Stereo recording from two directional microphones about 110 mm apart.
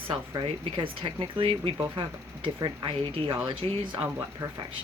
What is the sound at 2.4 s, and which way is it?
Speech, 50° right (ahead or behind).